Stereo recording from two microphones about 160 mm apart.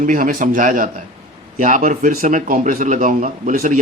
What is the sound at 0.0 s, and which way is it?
Speech, 55° right (ahead or behind).